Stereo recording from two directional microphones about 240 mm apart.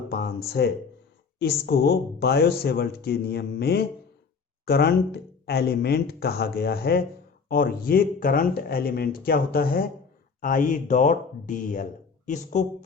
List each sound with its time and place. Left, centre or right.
0.1 s speech: left